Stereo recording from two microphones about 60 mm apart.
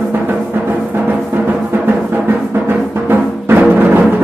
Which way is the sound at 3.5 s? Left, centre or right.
Right.